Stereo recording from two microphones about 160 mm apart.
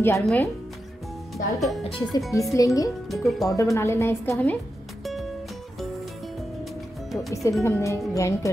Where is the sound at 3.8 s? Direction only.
15° left (ahead or behind).